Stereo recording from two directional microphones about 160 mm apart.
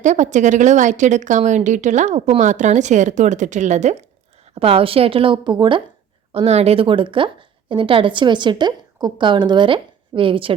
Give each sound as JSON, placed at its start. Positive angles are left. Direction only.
{"t": 0.0, "sound": "a woman's voice", "side_deg": -50}
{"t": 4.5, "sound": "a woman's voice", "side_deg": -35}